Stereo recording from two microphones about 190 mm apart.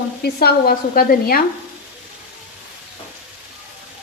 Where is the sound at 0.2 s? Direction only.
55° left (ahead or behind).